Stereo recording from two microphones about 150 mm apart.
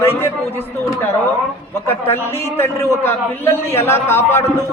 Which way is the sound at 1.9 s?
15° left (ahead or behind).